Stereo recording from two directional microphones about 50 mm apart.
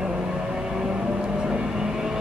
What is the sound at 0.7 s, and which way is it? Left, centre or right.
Vehicle, centre.